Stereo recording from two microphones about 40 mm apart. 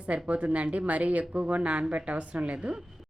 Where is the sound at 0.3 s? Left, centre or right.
Right.